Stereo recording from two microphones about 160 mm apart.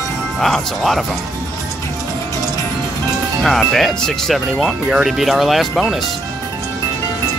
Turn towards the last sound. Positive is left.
turn(degrees=0)  # may be behind; listen again after turning